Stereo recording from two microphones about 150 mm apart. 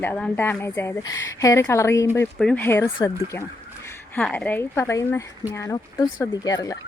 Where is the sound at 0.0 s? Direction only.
10° left (ahead or behind).